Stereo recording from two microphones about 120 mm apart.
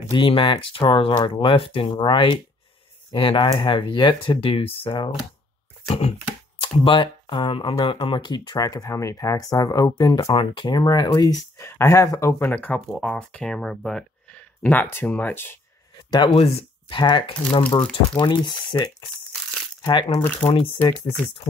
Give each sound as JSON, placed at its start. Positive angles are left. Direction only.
{"t": 0.1, "sound": "speech", "side_deg": 40}
{"t": 5.9, "sound": "speech", "side_deg": 60}
{"t": 6.6, "sound": "speech", "side_deg": 45}
{"t": 10.3, "sound": "speech", "side_deg": 45}
{"t": 12.8, "sound": "speech", "side_deg": -5}
{"t": 16.1, "sound": "speech", "side_deg": 40}
{"t": 16.3, "sound": "speech", "side_deg": 55}
{"t": 17.6, "sound": "speech", "side_deg": 10}
{"t": 18.2, "sound": "speech", "side_deg": 40}